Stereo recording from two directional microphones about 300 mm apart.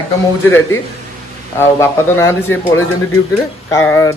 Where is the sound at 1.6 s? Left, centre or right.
Centre.